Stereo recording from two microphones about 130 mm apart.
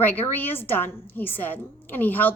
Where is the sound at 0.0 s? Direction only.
15° left (ahead or behind).